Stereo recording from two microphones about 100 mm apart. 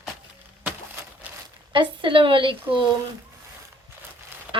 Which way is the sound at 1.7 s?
55° right (ahead or behind).